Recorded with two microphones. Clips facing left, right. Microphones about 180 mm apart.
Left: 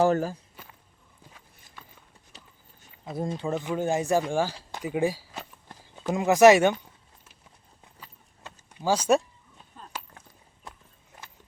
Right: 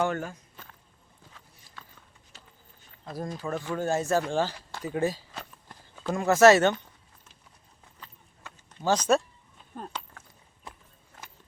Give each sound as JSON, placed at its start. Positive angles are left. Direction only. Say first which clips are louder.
{"t": 0.0, "sound": "speech", "louder": "left 6 dB", "side_deg": 35}
{"t": 0.5, "sound": "a sound", "louder": "left 1 dB", "side_deg": 10}
{"t": 3.2, "sound": "speech", "louder": "left 4 dB", "side_deg": 25}
{"t": 5.6, "sound": "walk", "louder": "left 2 dB", "side_deg": 20}
{"t": 8.7, "sound": "speech", "louder": "left 1 dB", "side_deg": 10}